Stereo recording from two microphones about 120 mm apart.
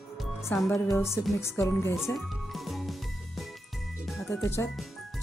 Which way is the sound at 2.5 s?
Centre (ahead or behind).